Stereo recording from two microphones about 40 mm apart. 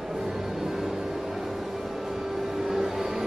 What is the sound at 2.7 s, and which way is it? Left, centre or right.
Music, centre.